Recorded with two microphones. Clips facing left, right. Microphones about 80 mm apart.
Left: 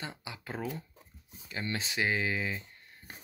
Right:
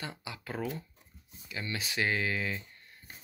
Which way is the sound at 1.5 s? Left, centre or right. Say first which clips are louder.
Left 1 dB; left.